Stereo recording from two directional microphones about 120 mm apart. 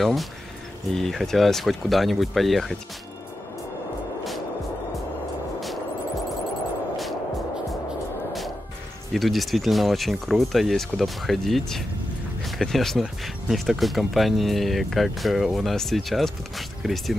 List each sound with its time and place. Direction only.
0.0 s speech: centre (ahead or behind)
9.1 s speech: centre (ahead or behind)